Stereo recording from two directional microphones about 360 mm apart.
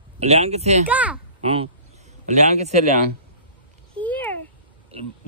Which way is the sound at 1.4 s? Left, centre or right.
Centre.